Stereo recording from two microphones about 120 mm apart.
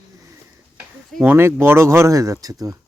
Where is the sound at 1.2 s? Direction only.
20° right (ahead or behind).